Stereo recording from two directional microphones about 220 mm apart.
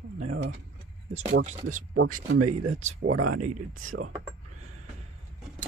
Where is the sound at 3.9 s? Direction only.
85° right.